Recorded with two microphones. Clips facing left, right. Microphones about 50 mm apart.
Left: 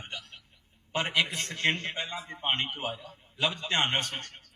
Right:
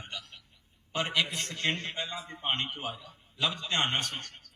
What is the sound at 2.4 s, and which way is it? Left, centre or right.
Speech, left.